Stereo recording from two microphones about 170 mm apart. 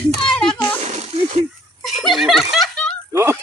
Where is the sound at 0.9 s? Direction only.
40° right (ahead or behind).